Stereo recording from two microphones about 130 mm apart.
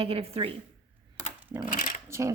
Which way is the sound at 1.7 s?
90° left.